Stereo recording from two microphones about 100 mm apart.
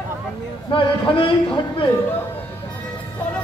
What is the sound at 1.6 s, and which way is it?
Speech, 45° left (ahead or behind).